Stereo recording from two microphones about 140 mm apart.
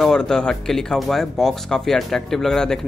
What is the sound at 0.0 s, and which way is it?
Speech, 5° left (ahead or behind).